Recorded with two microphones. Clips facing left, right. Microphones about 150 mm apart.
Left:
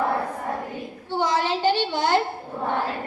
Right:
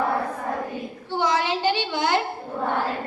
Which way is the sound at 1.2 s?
45° left (ahead or behind).